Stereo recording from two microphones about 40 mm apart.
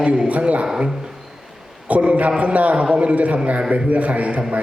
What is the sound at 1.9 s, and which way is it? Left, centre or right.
A man's voice, right.